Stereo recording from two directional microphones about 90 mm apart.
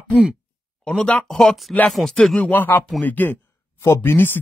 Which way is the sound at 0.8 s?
10° left (ahead or behind).